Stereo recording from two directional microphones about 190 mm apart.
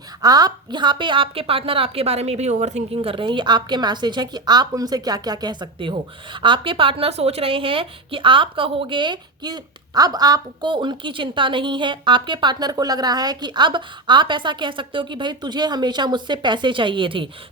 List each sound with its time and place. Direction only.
0.2 s a woman's voice: 20° right (ahead or behind)